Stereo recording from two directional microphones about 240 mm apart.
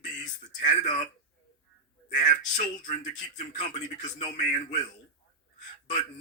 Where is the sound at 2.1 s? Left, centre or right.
Left.